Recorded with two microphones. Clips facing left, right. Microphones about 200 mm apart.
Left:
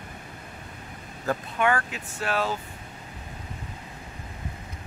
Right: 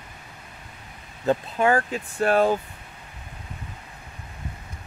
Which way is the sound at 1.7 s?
40° right (ahead or behind).